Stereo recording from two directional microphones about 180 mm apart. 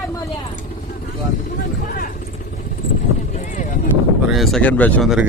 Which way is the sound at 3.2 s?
45° left (ahead or behind).